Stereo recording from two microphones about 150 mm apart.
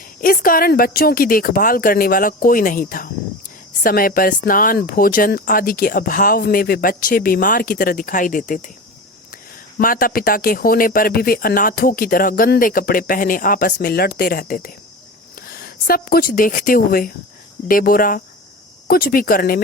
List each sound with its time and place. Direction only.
0.2 s speech: 70° left (ahead or behind)
9.7 s speech: 70° left (ahead or behind)
15.4 s speech: 90° left